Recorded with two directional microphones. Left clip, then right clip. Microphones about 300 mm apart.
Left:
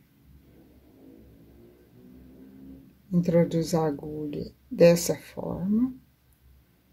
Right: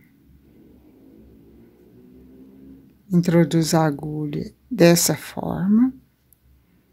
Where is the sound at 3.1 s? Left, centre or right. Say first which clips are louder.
Right 4 dB; right.